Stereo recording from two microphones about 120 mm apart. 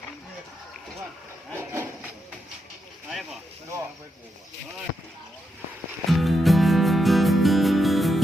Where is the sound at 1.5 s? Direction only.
20° right (ahead or behind).